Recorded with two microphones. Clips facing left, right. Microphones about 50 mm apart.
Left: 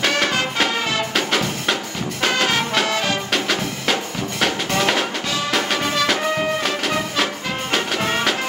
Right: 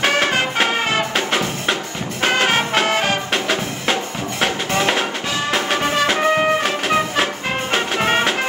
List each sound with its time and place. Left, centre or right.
0.0 s music: right
2.2 s music: right
3.3 s music: centre; by 6.5 s right
6.6 s music: centre